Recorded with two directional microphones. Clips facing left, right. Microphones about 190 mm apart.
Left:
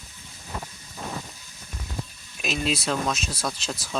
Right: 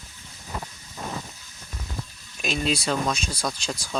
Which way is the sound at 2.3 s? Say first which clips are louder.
Right 1 dB; centre (ahead or behind).